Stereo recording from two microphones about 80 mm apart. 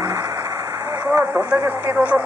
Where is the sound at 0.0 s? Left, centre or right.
Right.